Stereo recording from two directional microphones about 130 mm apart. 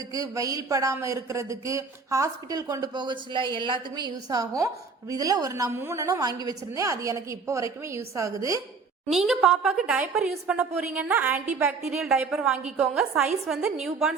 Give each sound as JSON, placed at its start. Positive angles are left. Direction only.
{"t": 0.1, "sound": "a woman's voice", "side_deg": -25}
{"t": 9.0, "sound": "a woman's voice", "side_deg": -5}